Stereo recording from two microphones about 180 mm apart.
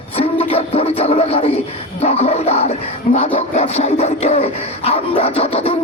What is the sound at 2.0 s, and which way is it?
Dog, 35° left (ahead or behind).